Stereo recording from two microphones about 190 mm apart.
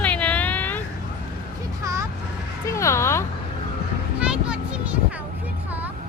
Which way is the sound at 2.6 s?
15° left (ahead or behind).